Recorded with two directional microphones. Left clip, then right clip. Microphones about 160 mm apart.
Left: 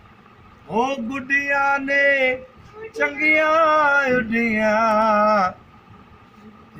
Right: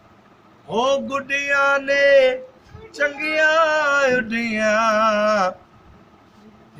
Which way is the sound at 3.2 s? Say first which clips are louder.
Left 2 dB; 35° right (ahead or behind).